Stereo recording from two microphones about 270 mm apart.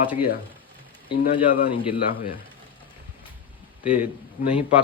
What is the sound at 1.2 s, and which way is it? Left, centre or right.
Speech, left.